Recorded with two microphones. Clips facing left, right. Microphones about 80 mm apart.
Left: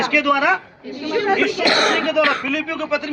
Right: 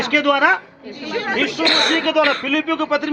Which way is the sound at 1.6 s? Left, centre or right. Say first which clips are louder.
Left 1 dB; centre.